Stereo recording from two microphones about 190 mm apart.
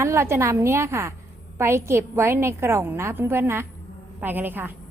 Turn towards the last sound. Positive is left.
turn(degrees=-10)  # may be behind; listen again after turning